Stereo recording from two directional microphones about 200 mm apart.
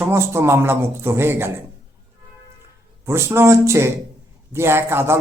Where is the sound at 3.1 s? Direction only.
15° right (ahead or behind).